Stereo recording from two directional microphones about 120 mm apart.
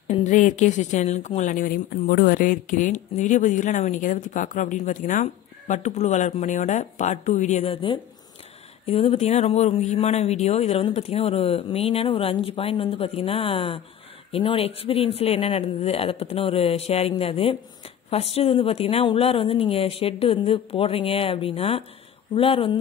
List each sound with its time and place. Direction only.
0.1 s a woman's voice: 85° left
7.6 s speech: 50° left (ahead or behind)